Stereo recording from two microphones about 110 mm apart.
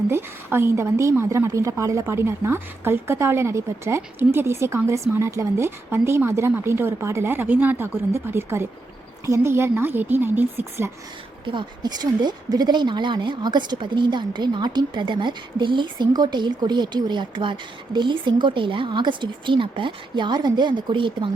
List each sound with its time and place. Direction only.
0.1 s a woman's voice: 20° right (ahead or behind)
11.4 s a woman's voice: 45° right (ahead or behind)